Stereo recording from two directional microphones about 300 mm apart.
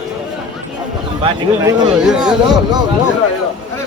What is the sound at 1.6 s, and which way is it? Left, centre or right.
Speech, centre.